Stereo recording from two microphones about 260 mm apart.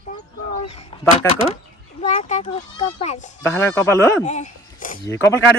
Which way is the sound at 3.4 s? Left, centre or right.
Centre.